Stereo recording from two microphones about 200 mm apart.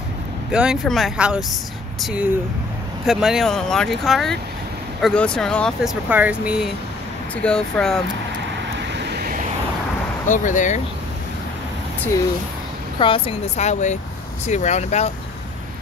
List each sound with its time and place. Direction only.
0.5 s speech: 5° right (ahead or behind)
6.0 s speech: 10° right (ahead or behind)
8.9 s vehicle: 55° right (ahead or behind)
10.2 s speech: 40° left (ahead or behind)
13.0 s speech: 25° left (ahead or behind)